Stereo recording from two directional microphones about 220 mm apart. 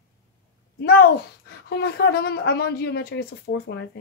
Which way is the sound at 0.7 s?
45° left (ahead or behind).